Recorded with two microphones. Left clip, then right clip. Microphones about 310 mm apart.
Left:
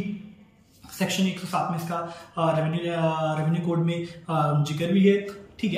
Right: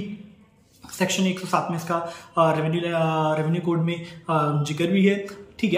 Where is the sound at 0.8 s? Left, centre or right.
Centre.